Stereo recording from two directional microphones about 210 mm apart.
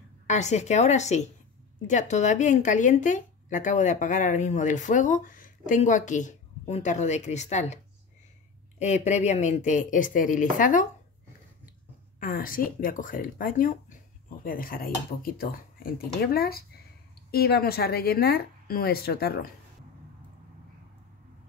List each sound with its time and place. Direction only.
0.3 s speech: 35° left (ahead or behind)
12.2 s speech: 40° left (ahead or behind)